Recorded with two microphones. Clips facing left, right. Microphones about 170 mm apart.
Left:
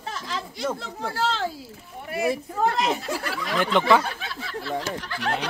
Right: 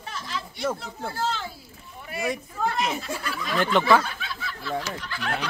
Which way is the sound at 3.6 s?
15° left (ahead or behind).